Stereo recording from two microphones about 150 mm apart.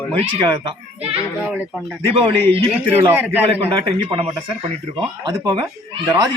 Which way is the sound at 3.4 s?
35° right (ahead or behind).